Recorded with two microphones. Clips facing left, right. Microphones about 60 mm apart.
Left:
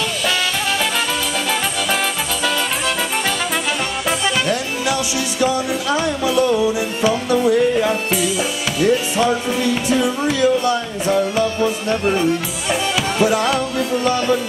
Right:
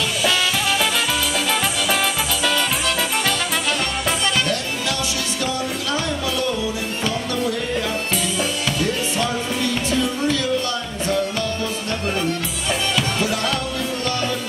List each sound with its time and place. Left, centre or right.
5.4 s music: centre